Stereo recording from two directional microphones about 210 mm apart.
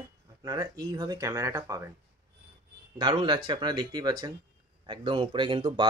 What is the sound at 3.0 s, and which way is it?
Speech, 20° right (ahead or behind).